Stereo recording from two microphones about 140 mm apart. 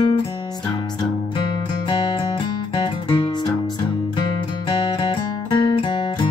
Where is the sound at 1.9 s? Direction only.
35° left (ahead or behind).